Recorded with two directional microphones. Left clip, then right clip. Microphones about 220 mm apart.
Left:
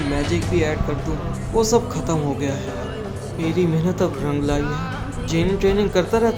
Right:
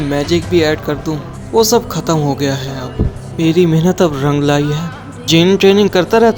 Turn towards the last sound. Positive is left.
turn(degrees=-35)  # may be behind; listen again after turning